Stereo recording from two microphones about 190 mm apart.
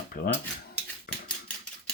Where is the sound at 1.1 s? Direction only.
50° left (ahead or behind).